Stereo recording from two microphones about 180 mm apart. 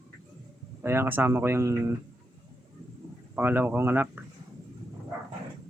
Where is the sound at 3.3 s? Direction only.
10° right (ahead or behind).